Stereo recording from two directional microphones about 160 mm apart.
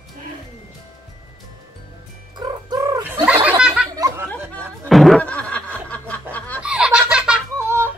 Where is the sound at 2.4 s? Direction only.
25° right (ahead or behind).